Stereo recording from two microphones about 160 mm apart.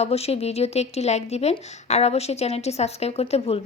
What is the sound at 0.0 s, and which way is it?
A woman's voice, 40° left (ahead or behind).